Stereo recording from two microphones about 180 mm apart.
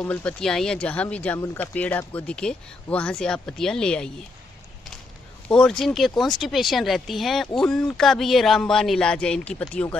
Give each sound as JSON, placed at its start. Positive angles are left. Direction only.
{"t": 0.0, "sound": "speech", "side_deg": 10}
{"t": 5.5, "sound": "speech", "side_deg": 5}